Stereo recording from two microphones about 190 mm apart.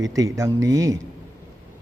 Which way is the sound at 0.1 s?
15° right (ahead or behind).